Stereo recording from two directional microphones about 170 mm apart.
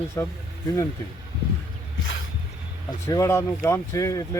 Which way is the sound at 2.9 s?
20° left (ahead or behind).